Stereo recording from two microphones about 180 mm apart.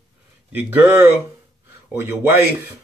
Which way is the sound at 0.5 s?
10° right (ahead or behind).